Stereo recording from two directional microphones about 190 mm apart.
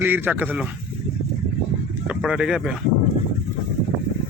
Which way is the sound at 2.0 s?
5° right (ahead or behind).